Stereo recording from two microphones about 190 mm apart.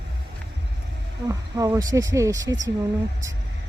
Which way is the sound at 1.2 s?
20° right (ahead or behind).